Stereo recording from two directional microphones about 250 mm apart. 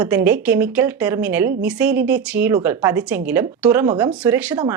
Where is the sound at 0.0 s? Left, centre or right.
Centre.